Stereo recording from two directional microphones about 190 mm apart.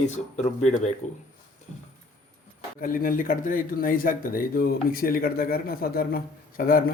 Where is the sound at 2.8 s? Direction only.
50° left (ahead or behind).